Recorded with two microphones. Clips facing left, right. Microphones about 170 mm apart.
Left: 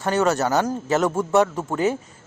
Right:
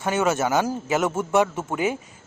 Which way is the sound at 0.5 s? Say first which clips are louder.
Left 2 dB; 5° right (ahead or behind).